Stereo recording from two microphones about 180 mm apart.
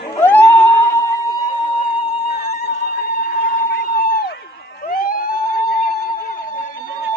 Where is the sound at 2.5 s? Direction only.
60° left (ahead or behind).